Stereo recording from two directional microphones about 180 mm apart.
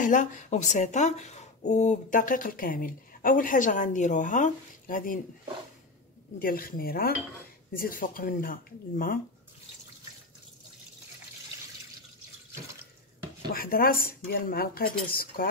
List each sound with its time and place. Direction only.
0.0 s speech: 45° left (ahead or behind)
6.4 s speech: 55° left (ahead or behind)
13.5 s speech: 55° left (ahead or behind)